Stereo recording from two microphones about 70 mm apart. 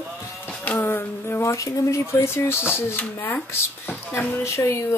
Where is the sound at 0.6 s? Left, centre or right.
Left.